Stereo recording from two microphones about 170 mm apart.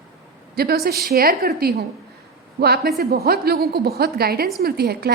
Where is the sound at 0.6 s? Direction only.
65° right (ahead or behind).